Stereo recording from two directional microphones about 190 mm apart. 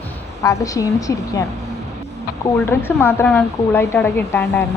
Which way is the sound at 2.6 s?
10° left (ahead or behind).